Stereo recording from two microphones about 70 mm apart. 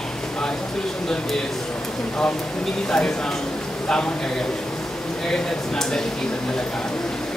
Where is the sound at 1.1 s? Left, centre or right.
Centre.